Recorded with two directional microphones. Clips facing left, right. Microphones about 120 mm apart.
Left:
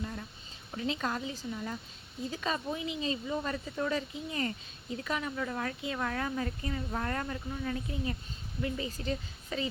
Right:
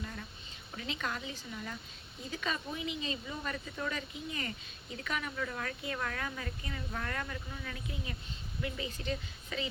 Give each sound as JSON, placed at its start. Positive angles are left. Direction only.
{"t": 0.0, "sound": "a sound", "side_deg": 15}
{"t": 1.0, "sound": "speech", "side_deg": 30}
{"t": 1.5, "sound": "speech", "side_deg": 15}
{"t": 2.3, "sound": "speech", "side_deg": 30}